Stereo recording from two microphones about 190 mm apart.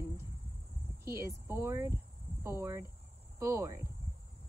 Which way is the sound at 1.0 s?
15° right (ahead or behind).